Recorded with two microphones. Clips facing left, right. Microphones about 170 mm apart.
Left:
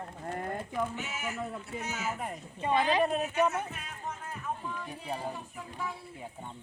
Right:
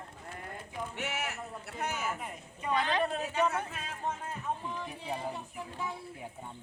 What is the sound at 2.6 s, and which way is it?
Speech, 25° left (ahead or behind).